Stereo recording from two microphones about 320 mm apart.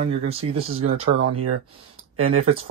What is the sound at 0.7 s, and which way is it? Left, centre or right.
Speech, right.